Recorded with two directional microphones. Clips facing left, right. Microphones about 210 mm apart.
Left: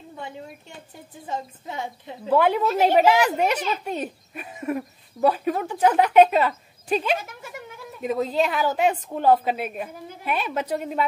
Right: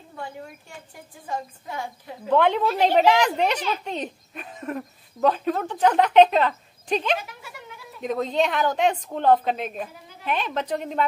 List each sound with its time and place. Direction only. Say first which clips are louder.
1.2 s a woman's voice: even; 20° left (ahead or behind)
2.2 s a woman's voice: even; 5° left (ahead or behind)